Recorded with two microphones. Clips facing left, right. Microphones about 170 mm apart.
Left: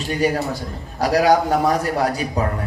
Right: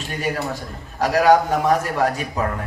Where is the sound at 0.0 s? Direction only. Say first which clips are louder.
Left 5 dB; 40° left (ahead or behind).